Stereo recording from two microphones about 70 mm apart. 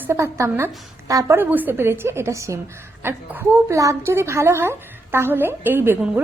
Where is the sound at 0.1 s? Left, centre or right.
Right.